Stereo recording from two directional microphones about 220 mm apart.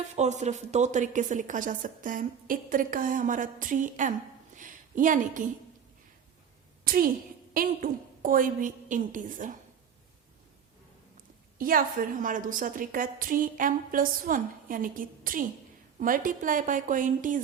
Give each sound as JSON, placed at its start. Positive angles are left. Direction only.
{"t": 0.2, "sound": "a woman's voice", "side_deg": -30}
{"t": 4.5, "sound": "a sound", "side_deg": -35}
{"t": 6.8, "sound": "a woman's voice", "side_deg": -40}
{"t": 11.5, "sound": "a woman's voice", "side_deg": -40}